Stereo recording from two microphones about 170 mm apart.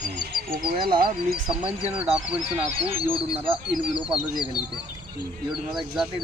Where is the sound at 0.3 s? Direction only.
60° right (ahead or behind).